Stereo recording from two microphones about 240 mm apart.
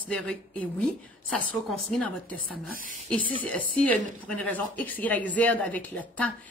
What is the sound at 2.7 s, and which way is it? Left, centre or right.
Speech, right.